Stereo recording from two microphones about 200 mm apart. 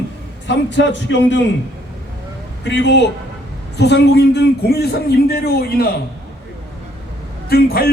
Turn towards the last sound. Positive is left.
turn(degrees=50)  # may be behind; listen again after turning